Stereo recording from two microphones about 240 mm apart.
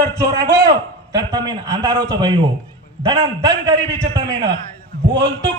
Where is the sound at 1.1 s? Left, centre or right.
Centre.